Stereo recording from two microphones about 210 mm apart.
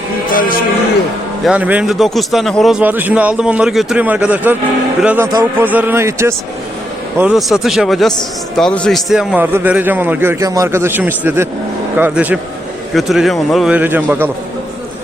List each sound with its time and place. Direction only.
0.3 s music: 40° left (ahead or behind)
1.5 s a man's voice: 5° right (ahead or behind)
7.2 s a man's voice: centre (ahead or behind)